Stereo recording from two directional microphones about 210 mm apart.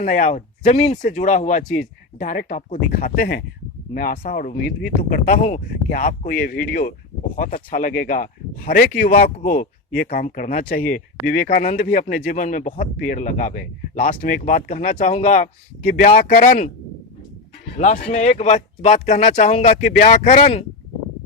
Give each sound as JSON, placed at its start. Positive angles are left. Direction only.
{"t": 0.0, "sound": "speech", "side_deg": 40}
{"t": 17.7, "sound": "speech", "side_deg": 35}